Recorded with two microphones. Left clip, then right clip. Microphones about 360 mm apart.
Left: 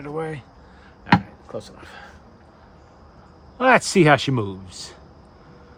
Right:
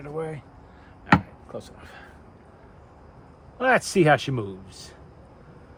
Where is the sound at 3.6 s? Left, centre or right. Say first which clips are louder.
Left 4 dB; left.